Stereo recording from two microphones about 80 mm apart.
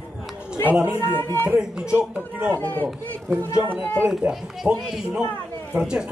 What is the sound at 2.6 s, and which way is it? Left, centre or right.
Speech, left.